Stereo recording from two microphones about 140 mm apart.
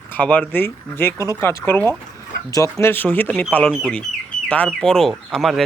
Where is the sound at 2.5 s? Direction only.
25° left (ahead or behind).